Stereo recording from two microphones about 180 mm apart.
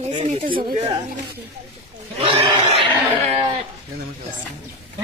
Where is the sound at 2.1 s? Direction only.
30° right (ahead or behind).